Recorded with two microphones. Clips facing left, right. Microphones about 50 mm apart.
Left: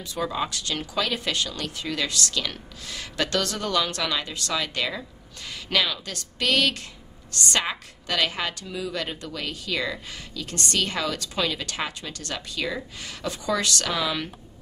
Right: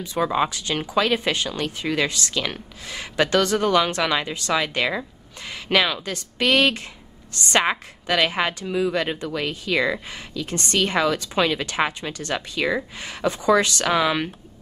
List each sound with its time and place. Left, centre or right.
0.0 s speech: right